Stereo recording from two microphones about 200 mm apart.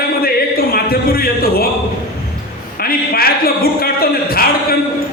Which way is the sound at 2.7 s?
50° left (ahead or behind).